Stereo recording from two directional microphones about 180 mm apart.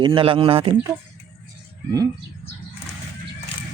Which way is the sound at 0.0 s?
30° right (ahead or behind).